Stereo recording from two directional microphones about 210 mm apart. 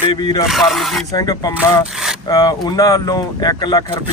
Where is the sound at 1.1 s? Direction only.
15° left (ahead or behind).